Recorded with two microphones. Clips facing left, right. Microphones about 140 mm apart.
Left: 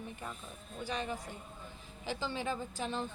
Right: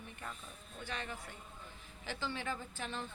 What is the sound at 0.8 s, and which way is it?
A woman's voice, 15° left (ahead or behind).